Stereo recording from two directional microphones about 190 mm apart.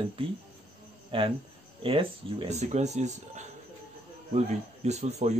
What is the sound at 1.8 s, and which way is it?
Speech, 30° right (ahead or behind).